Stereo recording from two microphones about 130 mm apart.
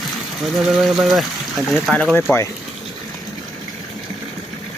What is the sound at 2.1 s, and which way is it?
Speech, 15° left (ahead or behind).